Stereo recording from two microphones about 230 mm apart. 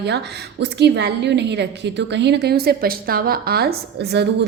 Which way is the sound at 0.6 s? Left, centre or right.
Right.